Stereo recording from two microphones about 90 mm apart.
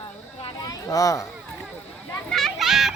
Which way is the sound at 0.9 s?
40° left (ahead or behind).